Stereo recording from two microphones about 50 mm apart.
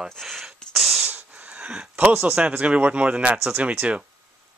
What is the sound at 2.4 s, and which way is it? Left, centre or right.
Speech, right.